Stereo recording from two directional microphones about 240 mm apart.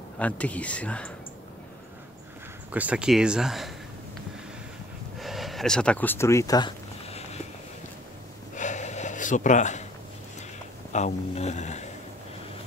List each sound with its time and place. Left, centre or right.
0.2 s speech: centre
2.7 s speech: centre
5.2 s a sound: centre; by 7.2 s left
8.5 s gasp: left
10.9 s speech: left